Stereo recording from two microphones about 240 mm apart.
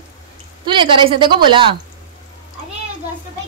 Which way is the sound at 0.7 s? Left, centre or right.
Centre.